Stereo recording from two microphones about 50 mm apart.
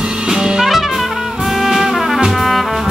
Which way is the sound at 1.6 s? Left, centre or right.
Centre.